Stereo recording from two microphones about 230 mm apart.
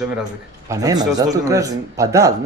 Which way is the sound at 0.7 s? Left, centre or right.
Centre.